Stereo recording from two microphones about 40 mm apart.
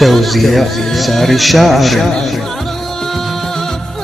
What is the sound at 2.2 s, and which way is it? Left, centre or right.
Music, centre.